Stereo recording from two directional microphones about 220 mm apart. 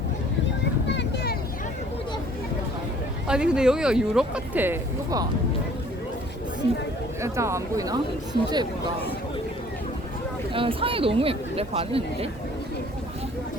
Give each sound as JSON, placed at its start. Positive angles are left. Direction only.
{"t": 0.9, "sound": "vehicle", "side_deg": 50}
{"t": 3.2, "sound": "speech", "side_deg": -5}
{"t": 7.2, "sound": "speech", "side_deg": -15}
{"t": 10.5, "sound": "speech", "side_deg": -25}